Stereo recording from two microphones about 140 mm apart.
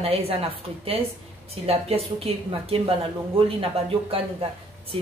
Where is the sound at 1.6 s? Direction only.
45° right (ahead or behind).